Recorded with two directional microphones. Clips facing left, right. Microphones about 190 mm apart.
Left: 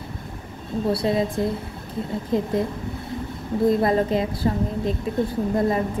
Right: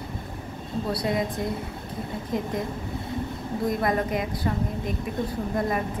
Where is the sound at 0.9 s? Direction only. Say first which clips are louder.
Left 3 dB; 25° left (ahead or behind).